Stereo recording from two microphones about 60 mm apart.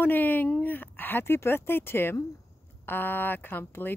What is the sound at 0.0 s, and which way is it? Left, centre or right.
Speech, left.